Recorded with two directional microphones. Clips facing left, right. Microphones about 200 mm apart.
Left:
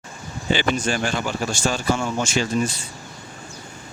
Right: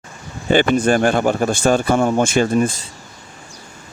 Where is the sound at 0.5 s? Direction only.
55° right (ahead or behind).